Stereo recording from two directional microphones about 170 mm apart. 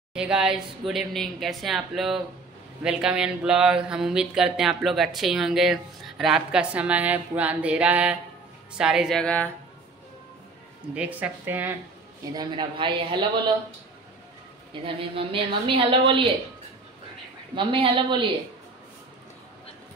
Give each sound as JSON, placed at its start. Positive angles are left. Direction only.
{"t": 0.1, "sound": "speech", "side_deg": -5}
{"t": 11.0, "sound": "speech", "side_deg": -10}
{"t": 12.4, "sound": "speech", "side_deg": -25}
{"t": 14.7, "sound": "a woman's voice", "side_deg": -30}
{"t": 17.6, "sound": "speech", "side_deg": -30}